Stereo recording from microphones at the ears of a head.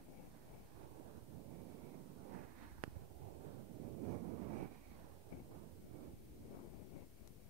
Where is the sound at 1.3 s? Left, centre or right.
Right.